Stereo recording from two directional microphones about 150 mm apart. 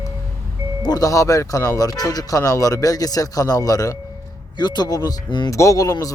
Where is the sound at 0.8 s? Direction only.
25° left (ahead or behind).